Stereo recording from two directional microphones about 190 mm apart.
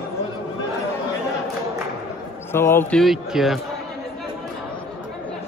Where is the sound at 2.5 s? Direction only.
10° left (ahead or behind).